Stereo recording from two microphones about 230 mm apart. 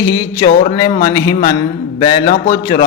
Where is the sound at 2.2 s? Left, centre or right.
Left.